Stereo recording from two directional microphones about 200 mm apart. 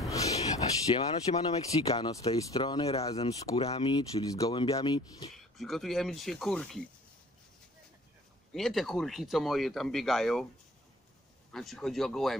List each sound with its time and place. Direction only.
0.1 s a sound: 15° left (ahead or behind)
1.3 s speech: 30° left (ahead or behind)
5.3 s speech: centre (ahead or behind)
8.5 s speech: centre (ahead or behind)
11.5 s speech: centre (ahead or behind)